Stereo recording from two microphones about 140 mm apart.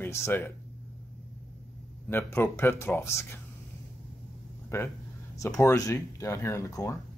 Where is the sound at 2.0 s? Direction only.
15° left (ahead or behind).